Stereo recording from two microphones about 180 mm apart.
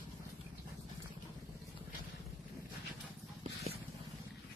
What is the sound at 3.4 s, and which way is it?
Vehicle, 35° right (ahead or behind).